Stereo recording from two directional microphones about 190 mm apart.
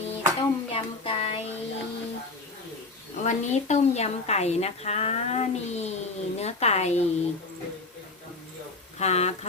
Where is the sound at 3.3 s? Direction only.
35° left (ahead or behind).